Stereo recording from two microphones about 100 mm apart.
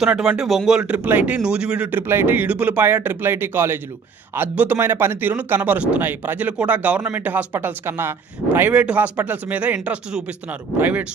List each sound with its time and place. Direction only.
0.0 s speech: 10° right (ahead or behind)